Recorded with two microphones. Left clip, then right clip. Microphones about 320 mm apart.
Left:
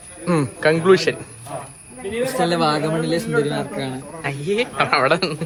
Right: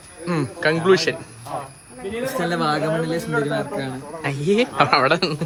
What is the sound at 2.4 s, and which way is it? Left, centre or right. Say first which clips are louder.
Speech: even; centre.